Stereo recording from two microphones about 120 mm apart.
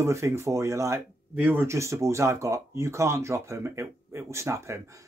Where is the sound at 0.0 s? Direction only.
25° right (ahead or behind).